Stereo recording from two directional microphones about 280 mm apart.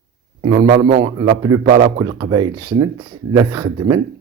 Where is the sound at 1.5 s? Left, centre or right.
Centre.